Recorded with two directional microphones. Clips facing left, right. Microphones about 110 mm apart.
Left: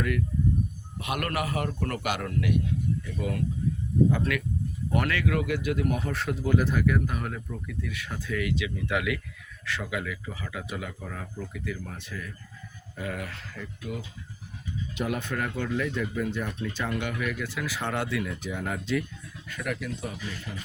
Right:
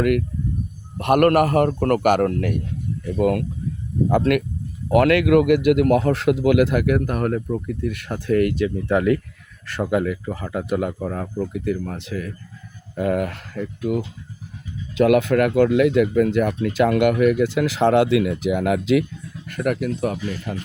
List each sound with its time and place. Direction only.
0.0 s a man's voice: 60° right (ahead or behind)
3.2 s a man's voice: 60° right (ahead or behind)
4.9 s a man's voice: 80° right
13.0 s speech: 55° right (ahead or behind)
15.0 s speech: 90° right
19.5 s a man's voice: 55° right (ahead or behind)